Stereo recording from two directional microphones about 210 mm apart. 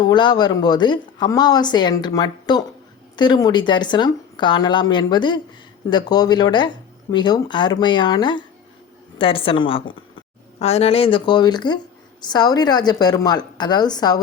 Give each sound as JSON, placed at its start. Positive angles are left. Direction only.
{"t": 0.0, "sound": "a woman's voice", "side_deg": 20}